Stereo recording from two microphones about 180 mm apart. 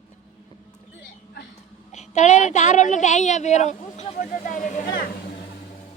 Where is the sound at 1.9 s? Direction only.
40° left (ahead or behind).